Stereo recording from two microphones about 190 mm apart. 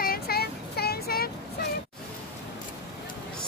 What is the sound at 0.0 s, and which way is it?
Child singing, 55° left (ahead or behind).